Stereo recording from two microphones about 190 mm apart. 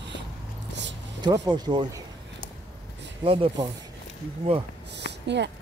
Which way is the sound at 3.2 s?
30° right (ahead or behind).